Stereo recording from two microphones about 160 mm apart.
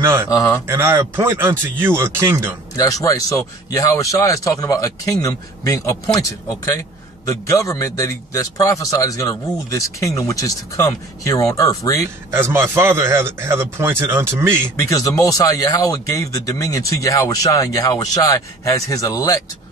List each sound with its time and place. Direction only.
0.0 s a man's voice: 15° right (ahead or behind)
0.3 s a man's voice: 20° left (ahead or behind)
0.7 s a man's voice: 15° right (ahead or behind)
2.7 s a man's voice: 20° left (ahead or behind)
12.3 s a man's voice: 15° right (ahead or behind)
14.8 s a man's voice: 20° left (ahead or behind)